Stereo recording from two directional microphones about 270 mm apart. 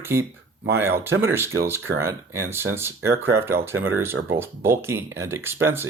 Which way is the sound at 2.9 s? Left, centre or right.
Right.